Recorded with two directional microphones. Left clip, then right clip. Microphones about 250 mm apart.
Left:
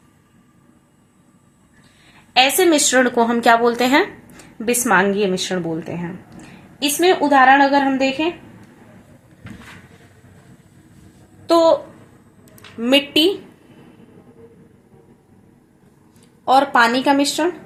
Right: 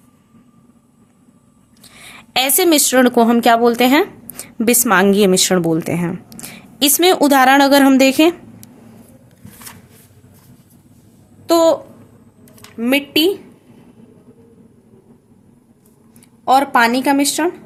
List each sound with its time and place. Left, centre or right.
2.3 s speech: right
11.4 s babbling: right
12.8 s speech: centre
16.5 s speech: centre